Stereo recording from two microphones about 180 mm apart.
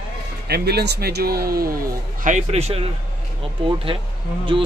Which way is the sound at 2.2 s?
40° right (ahead or behind).